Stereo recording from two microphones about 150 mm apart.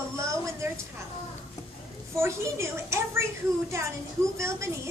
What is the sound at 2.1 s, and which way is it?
A woman's voice, 20° right (ahead or behind).